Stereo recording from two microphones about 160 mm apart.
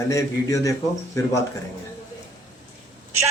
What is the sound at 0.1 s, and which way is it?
A man's voice, 20° left (ahead or behind).